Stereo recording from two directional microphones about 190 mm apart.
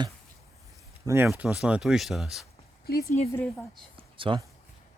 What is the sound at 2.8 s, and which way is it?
Speech, 55° left (ahead or behind).